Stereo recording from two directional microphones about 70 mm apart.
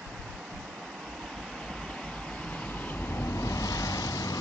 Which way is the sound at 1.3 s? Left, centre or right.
Centre.